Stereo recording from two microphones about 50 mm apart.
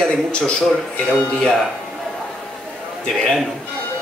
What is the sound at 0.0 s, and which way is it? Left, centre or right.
Speech, centre.